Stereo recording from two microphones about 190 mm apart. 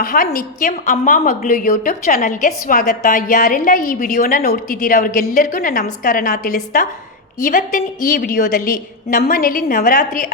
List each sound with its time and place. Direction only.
0.0 s a woman's voice: 45° left (ahead or behind)